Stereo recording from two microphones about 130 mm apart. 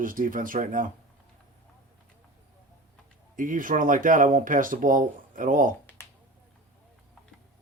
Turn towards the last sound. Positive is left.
turn(degrees=20)  # may be behind; listen again after turning